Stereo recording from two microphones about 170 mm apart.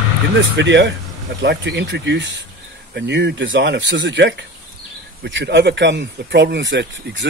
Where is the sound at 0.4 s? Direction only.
90° right.